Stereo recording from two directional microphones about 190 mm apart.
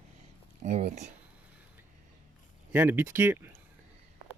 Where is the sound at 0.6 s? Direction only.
40° right (ahead or behind).